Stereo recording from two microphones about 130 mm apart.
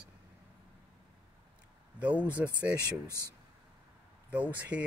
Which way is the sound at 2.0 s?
10° right (ahead or behind).